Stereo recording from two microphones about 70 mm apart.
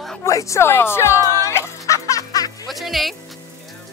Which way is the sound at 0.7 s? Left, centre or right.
Left.